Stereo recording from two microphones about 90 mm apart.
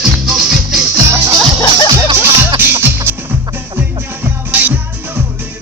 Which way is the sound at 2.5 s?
25° right (ahead or behind).